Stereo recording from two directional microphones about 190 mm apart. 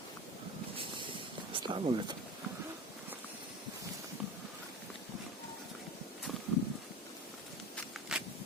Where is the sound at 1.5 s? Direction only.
25° right (ahead or behind).